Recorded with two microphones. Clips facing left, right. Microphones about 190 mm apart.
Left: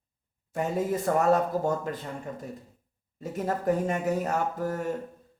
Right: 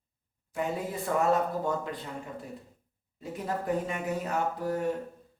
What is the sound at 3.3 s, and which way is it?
Speech, 45° left (ahead or behind).